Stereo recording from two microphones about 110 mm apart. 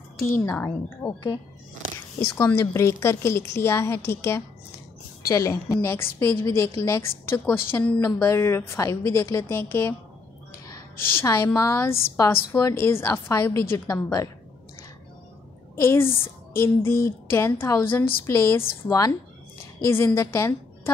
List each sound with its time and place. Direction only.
0.2 s a woman's voice: 25° left (ahead or behind)
11.0 s a woman's voice: 20° left (ahead or behind)
15.7 s a woman's voice: 25° left (ahead or behind)
20.2 s a woman's voice: 25° left (ahead or behind)